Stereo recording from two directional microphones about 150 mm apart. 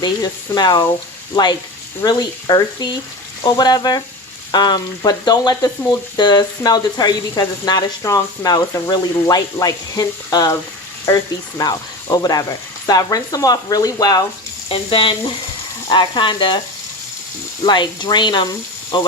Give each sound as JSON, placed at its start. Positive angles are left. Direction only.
{"t": 0.0, "sound": "speech", "side_deg": 30}
{"t": 2.0, "sound": "speech", "side_deg": 25}
{"t": 14.7, "sound": "speech", "side_deg": 40}
{"t": 17.6, "sound": "speech", "side_deg": 30}